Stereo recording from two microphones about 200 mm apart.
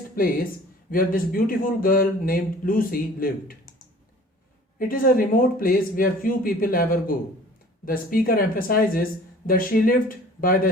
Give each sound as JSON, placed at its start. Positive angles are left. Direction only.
{"t": 0.2, "sound": "speech", "side_deg": 45}
{"t": 4.8, "sound": "speech", "side_deg": 45}